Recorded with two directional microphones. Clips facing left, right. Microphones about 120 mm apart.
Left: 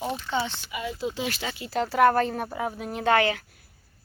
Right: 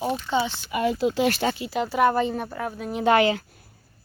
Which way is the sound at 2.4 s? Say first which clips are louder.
Even; 15° left (ahead or behind).